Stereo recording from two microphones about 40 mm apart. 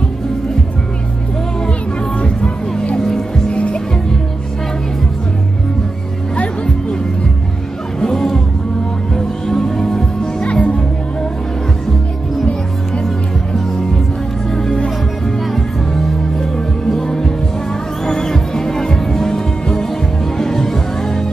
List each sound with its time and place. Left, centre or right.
2.1 s music: left
3.0 s music: centre
3.4 s music: left
6.3 s music: left
8.0 s music: centre; by 10.8 s left
14.5 s music: centre
15.9 s music: centre